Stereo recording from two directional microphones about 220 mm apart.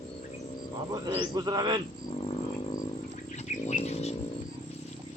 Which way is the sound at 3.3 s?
30° left (ahead or behind).